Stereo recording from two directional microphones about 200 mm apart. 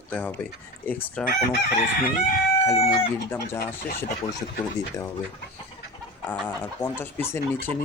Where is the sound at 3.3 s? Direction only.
15° left (ahead or behind).